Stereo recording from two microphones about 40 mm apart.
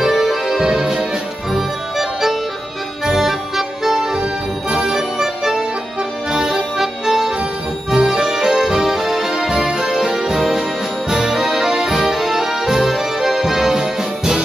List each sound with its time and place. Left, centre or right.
0.0 s music: centre